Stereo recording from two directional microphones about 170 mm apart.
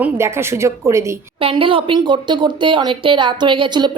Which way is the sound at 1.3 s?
30° right (ahead or behind).